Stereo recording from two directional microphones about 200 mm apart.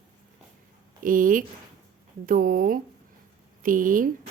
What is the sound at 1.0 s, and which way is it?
A man's voice, 40° right (ahead or behind).